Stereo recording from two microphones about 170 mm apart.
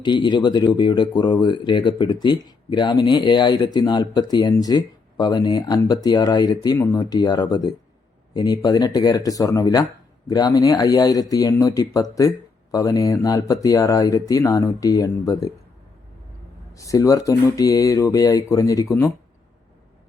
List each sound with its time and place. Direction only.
0.0 s speech: 25° left (ahead or behind)
16.7 s speech: 20° left (ahead or behind)